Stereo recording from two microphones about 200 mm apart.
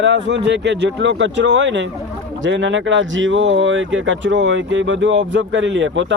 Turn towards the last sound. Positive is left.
turn(degrees=-70)  # may be behind; listen again after turning